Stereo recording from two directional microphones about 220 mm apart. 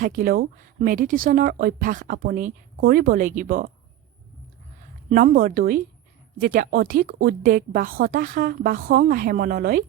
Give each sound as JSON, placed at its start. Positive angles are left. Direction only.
{"t": 0.0, "sound": "speech", "side_deg": -40}
{"t": 5.0, "sound": "speech", "side_deg": -40}